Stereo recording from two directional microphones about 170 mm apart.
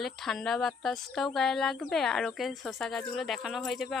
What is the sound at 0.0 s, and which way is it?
Speech, centre (ahead or behind).